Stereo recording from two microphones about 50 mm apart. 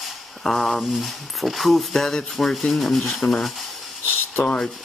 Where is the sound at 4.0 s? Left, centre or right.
Left.